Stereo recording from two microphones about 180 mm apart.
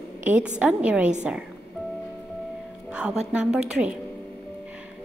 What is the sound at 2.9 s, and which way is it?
A woman's voice, 5° right (ahead or behind).